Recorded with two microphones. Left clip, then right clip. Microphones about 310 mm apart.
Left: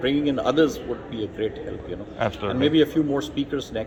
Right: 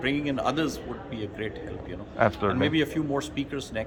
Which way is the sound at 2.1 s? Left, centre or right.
Right.